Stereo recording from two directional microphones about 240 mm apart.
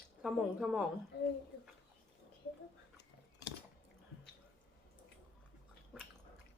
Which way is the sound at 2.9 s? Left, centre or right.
Left.